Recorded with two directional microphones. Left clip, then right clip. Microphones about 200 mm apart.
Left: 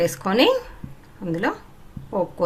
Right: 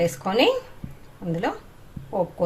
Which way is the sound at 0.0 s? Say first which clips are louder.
Left 2 dB; 40° left (ahead or behind).